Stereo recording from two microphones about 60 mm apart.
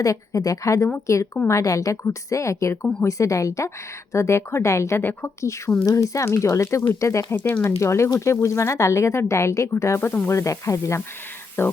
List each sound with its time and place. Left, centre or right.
0.0 s a woman's voice: left
1.0 s speech: left
1.5 s a woman's voice: left
2.0 s speech: left
4.9 s a woman's voice: left
5.4 s speech: left
7.3 s speech: left
7.6 s speech: left
11.6 s a woman's voice: left